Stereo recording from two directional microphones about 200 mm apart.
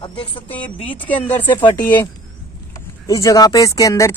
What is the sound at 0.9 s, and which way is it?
Speech, 10° left (ahead or behind).